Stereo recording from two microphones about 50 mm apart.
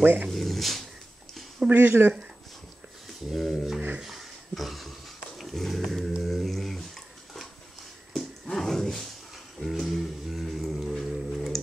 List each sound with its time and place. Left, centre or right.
0.0 s speech: right
0.3 s dog: centre
1.8 s speech: right
3.3 s speech: centre
4.0 s a sound: centre
5.4 s dog: centre
8.1 s wild animals: centre
9.6 s music: centre
11.3 s tick-tock: centre